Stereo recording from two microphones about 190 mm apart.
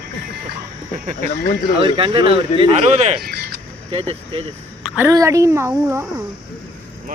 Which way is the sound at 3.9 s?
30° right (ahead or behind).